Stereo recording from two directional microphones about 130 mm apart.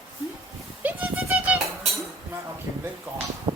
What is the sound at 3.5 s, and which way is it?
Music, 30° right (ahead or behind).